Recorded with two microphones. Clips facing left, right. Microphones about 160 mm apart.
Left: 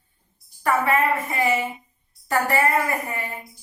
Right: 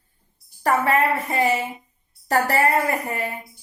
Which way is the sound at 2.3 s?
40° right (ahead or behind).